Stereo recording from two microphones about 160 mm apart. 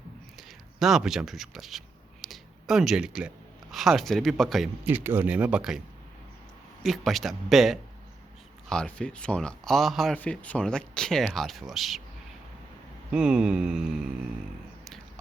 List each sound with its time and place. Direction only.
0.3 s speech: centre (ahead or behind)
4.9 s speech: 10° right (ahead or behind)
6.8 s speech: centre (ahead or behind)
13.1 s speech: 5° right (ahead or behind)